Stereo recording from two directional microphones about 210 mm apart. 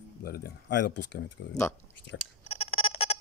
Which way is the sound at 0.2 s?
45° left (ahead or behind).